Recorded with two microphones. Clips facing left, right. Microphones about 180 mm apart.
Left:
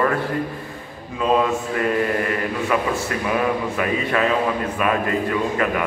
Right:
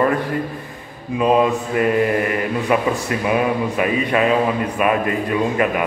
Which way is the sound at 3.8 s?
15° right (ahead or behind).